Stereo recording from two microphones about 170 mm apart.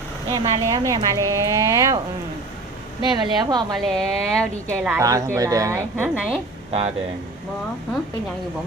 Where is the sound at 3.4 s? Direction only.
25° right (ahead or behind).